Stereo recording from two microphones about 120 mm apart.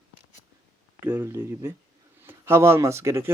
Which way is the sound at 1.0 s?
20° right (ahead or behind).